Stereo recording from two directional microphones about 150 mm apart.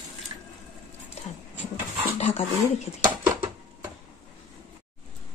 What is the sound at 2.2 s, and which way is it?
Dog, 45° left (ahead or behind).